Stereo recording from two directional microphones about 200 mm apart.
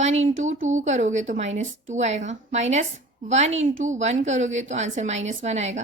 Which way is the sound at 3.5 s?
75° right (ahead or behind).